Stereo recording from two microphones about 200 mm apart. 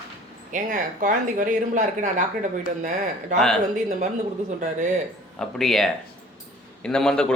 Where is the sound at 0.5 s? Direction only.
40° right (ahead or behind).